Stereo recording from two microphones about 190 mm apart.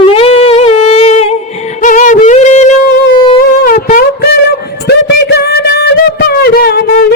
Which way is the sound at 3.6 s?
50° left (ahead or behind).